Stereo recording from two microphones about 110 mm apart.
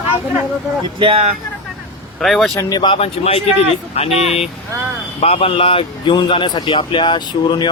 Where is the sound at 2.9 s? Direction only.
60° left (ahead or behind).